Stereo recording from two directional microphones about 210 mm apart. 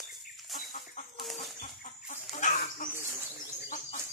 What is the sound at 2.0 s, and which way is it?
Chicken, 40° left (ahead or behind).